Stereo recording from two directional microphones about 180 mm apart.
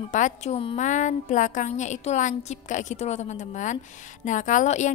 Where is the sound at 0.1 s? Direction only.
45° left (ahead or behind).